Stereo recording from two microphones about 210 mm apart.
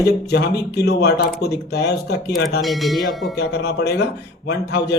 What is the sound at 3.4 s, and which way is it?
Speech, 50° left (ahead or behind).